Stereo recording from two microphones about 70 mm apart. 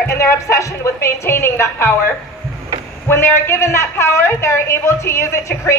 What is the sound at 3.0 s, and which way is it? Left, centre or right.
Speech, left.